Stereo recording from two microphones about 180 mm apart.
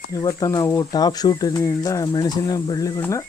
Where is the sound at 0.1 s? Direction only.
20° left (ahead or behind).